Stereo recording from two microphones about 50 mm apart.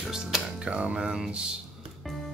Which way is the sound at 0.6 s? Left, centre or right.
Right.